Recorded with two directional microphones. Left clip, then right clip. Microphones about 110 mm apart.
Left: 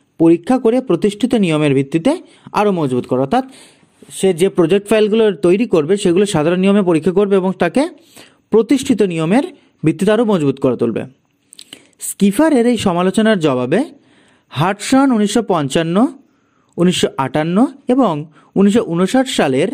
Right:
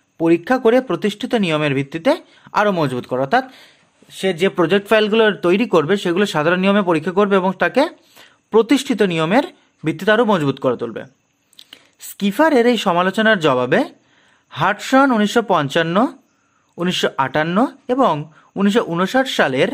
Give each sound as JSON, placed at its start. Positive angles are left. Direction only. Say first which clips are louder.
{"t": 0.2, "sound": "speech", "louder": "left 3 dB", "side_deg": 25}
{"t": 4.1, "sound": "a man's voice", "louder": "left 4 dB", "side_deg": 30}